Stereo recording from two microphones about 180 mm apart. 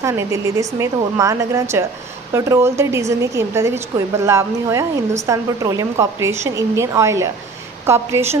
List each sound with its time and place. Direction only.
0.0 s speech: 15° right (ahead or behind)